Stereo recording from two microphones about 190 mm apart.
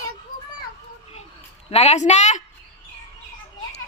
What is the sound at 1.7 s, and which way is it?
Speech, 35° left (ahead or behind).